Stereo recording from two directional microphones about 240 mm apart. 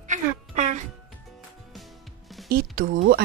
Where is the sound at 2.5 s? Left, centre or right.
Right.